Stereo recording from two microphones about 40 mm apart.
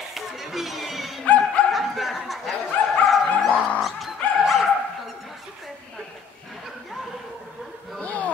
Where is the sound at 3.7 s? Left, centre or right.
Centre.